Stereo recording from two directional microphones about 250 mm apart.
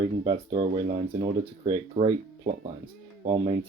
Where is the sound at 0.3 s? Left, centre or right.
Centre.